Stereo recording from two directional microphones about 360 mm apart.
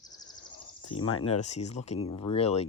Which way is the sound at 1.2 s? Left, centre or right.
Centre.